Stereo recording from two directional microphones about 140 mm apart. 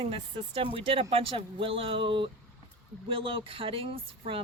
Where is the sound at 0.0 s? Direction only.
40° right (ahead or behind).